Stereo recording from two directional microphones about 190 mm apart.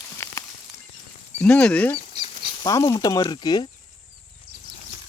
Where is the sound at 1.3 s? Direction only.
5° left (ahead or behind).